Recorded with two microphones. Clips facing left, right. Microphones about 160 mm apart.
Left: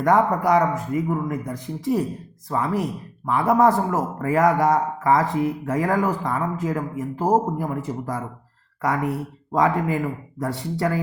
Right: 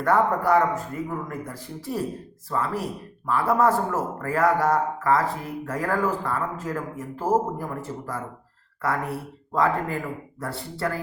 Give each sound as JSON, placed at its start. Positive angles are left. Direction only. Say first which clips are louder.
{"t": 0.0, "sound": "a man's voice", "louder": "left 3 dB", "side_deg": 15}
{"t": 9.6, "sound": "a man's voice", "louder": "left 3 dB", "side_deg": 15}